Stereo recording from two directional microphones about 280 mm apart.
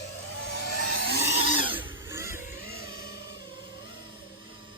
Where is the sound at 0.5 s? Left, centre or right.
Left.